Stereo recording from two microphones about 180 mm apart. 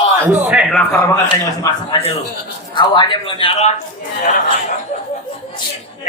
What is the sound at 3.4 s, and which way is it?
Speech, 40° left (ahead or behind).